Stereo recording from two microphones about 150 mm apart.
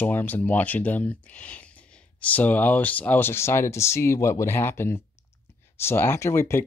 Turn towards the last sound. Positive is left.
turn(degrees=20)  # may be behind; listen again after turning